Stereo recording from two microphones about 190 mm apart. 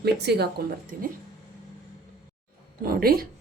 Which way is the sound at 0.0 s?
60° right (ahead or behind).